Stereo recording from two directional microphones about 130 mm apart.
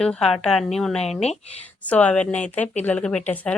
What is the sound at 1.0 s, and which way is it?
Speech, 55° left (ahead or behind).